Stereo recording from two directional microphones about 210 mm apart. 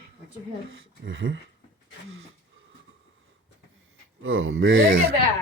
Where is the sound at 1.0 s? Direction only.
65° right (ahead or behind).